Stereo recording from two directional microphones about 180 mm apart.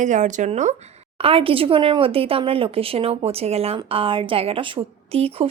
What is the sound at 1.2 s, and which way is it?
Speech, 30° right (ahead or behind).